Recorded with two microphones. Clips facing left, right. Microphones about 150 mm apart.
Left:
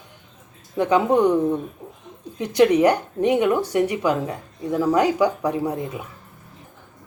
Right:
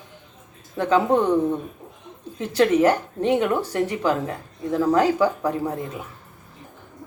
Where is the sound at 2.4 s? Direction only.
15° left (ahead or behind).